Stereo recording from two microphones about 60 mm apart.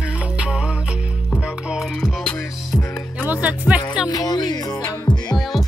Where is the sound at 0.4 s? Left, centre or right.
Centre.